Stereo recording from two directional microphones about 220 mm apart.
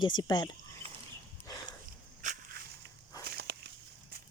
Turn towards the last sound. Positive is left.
turn(degrees=-50)  # may be behind; listen again after turning